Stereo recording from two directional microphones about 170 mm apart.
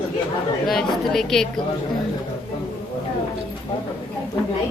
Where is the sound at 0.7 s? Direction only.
Centre (ahead or behind).